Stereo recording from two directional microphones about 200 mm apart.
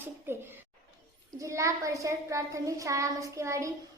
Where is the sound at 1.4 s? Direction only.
15° right (ahead or behind).